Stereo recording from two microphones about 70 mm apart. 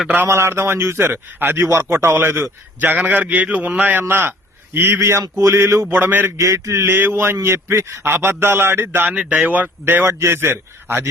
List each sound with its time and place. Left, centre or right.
0.3 s a man's voice: right
5.9 s a man's voice: right
6.3 s a man's voice: right
9.1 s a man's voice: centre; by 11.1 s right